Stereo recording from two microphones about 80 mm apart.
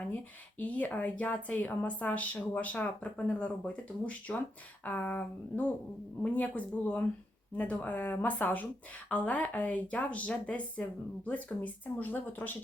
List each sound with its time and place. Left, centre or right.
0.6 s a woman's voice: centre